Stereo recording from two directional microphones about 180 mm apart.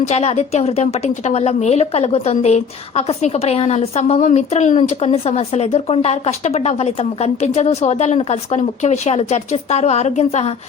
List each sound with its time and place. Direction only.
0.1 s a woman's voice: 35° left (ahead or behind)